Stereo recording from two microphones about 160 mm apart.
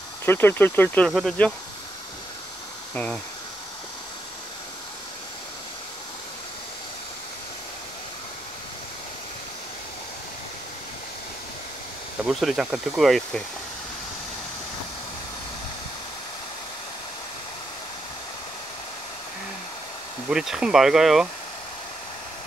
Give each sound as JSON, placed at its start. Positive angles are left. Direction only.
{"t": 0.2, "sound": "speech", "side_deg": 15}
{"t": 2.9, "sound": "speech", "side_deg": 10}
{"t": 12.3, "sound": "speech", "side_deg": 0}
{"t": 20.2, "sound": "speech", "side_deg": -5}